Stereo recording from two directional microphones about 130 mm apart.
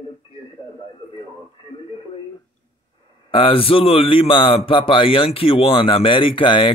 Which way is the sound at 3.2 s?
45° left (ahead or behind).